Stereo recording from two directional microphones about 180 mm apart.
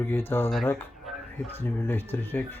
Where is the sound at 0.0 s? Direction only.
10° left (ahead or behind).